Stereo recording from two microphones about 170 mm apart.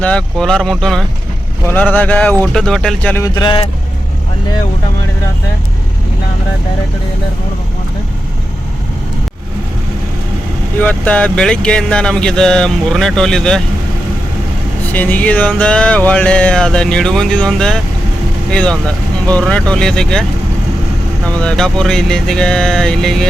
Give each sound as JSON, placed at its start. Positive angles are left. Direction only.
{"t": 0.0, "sound": "speech", "side_deg": 5}
{"t": 1.6, "sound": "a sound", "side_deg": 10}
{"t": 2.4, "sound": "speech", "side_deg": 5}
{"t": 3.2, "sound": "speech", "side_deg": 25}
{"t": 10.8, "sound": "speech", "side_deg": 10}
{"t": 14.9, "sound": "a sound", "side_deg": 10}
{"t": 18.5, "sound": "speech", "side_deg": 5}
{"t": 21.2, "sound": "speech", "side_deg": 5}